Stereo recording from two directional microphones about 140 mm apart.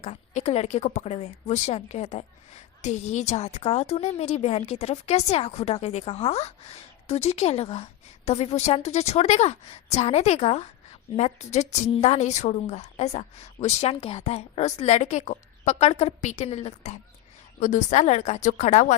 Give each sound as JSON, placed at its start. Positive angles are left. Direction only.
{"t": 0.0, "sound": "a woman's voice", "side_deg": 50}